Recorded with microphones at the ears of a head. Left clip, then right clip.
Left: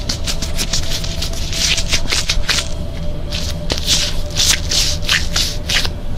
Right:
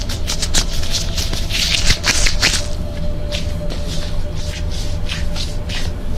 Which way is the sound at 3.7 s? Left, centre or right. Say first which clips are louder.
Left 11 dB; left.